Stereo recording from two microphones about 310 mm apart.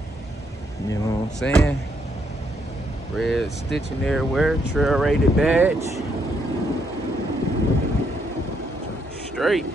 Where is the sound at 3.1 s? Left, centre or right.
Centre.